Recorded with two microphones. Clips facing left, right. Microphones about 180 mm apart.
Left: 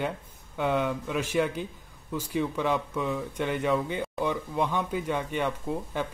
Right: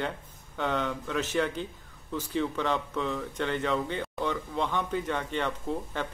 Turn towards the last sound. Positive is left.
turn(degrees=10)  # may be behind; listen again after turning